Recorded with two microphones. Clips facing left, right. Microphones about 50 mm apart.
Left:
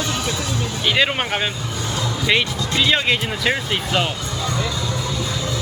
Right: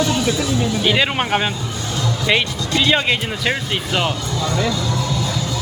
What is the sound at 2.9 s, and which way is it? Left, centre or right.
Speech, centre.